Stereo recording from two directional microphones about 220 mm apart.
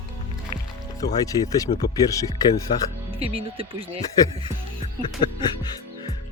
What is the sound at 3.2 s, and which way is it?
Speech, 25° right (ahead or behind).